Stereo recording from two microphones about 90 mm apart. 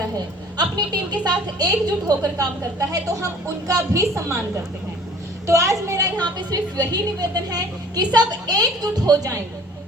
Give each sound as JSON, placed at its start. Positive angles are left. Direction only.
{"t": 1.1, "sound": "a woman's voice", "side_deg": -50}
{"t": 5.5, "sound": "speech", "side_deg": -30}
{"t": 6.1, "sound": "a woman's voice", "side_deg": -50}